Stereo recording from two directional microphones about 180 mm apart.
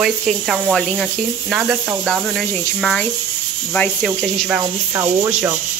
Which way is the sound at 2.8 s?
5° left (ahead or behind).